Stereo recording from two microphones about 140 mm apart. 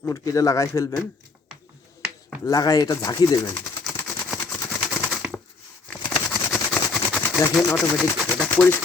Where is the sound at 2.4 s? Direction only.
25° left (ahead or behind).